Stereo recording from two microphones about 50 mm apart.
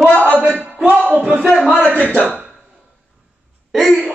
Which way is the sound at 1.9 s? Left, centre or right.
Left.